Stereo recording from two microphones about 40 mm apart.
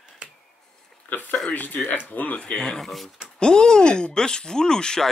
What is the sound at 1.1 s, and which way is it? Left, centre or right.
Speech, left.